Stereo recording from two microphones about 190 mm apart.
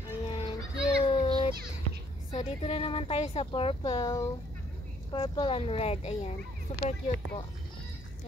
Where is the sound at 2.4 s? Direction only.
35° left (ahead or behind).